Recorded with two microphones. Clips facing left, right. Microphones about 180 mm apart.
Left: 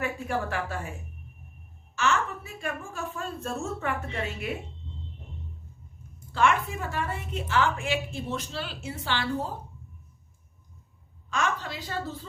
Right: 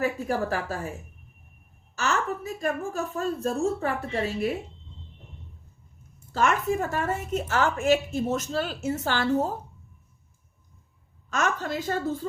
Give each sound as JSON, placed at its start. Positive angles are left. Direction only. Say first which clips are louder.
{"t": 0.0, "sound": "a woman's voice", "louder": "right 4 dB", "side_deg": -40}
{"t": 2.0, "sound": "a woman's voice", "louder": "even", "side_deg": -40}
{"t": 6.3, "sound": "a woman's voice", "louder": "right 1 dB", "side_deg": -40}
{"t": 11.3, "sound": "a woman's voice", "louder": "right 3 dB", "side_deg": -45}